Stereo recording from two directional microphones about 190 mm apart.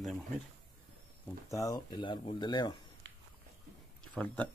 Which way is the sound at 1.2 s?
15° left (ahead or behind).